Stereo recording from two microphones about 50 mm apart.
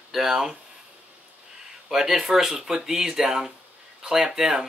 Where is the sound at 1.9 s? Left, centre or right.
Centre.